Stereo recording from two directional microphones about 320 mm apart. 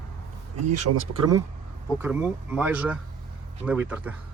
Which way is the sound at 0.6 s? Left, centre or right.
Right.